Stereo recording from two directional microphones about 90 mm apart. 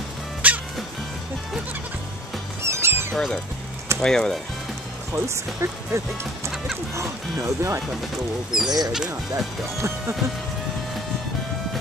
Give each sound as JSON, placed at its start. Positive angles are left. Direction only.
{"t": 0.4, "sound": "music", "side_deg": -15}
{"t": 2.6, "sound": "music", "side_deg": -30}
{"t": 4.0, "sound": "speech", "side_deg": 5}
{"t": 5.1, "sound": "speech", "side_deg": -30}
{"t": 9.8, "sound": "speech", "side_deg": -30}